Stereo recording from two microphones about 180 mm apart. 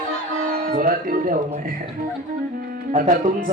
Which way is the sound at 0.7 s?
50° right (ahead or behind).